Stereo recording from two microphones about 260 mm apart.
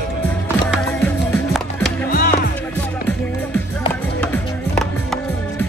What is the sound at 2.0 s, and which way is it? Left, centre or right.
Music, left.